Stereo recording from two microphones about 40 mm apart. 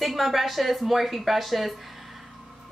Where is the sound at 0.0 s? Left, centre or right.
Centre.